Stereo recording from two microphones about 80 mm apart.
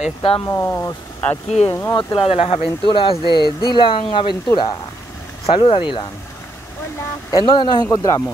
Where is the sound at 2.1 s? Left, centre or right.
Left.